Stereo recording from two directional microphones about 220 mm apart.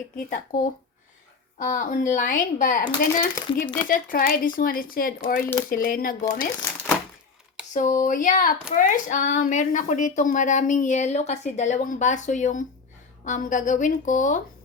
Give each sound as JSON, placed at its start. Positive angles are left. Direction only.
{"t": 0.3, "sound": "speech", "side_deg": 35}
{"t": 7.7, "sound": "speech", "side_deg": 35}